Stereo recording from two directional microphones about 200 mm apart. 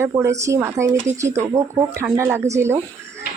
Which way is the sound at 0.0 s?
15° right (ahead or behind).